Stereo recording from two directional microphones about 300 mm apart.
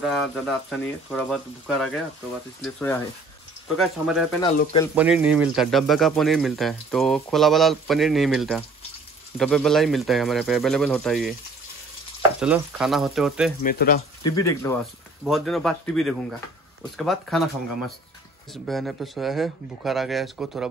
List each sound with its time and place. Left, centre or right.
0.0 s speech: centre
13.6 s speech: left
14.2 s speech: centre